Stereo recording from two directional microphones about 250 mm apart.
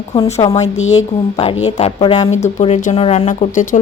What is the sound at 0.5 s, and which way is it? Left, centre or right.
Speech, left.